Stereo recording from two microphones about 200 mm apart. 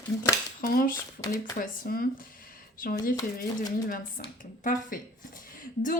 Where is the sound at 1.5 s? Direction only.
45° left (ahead or behind).